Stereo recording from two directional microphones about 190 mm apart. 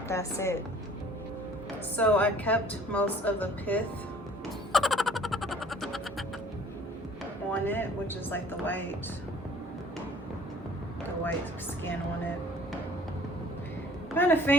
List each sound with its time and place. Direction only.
0.1 s a woman's voice: 15° left (ahead or behind)
2.0 s a woman's voice: 10° left (ahead or behind)
4.7 s music: centre (ahead or behind)
7.5 s a woman's voice: 10° left (ahead or behind)
14.2 s a woman's voice: 10° left (ahead or behind)